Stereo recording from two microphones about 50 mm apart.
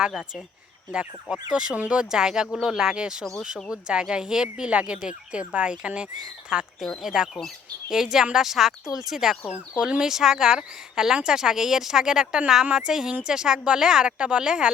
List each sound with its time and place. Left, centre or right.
0.1 s speech: centre
6.7 s speech: centre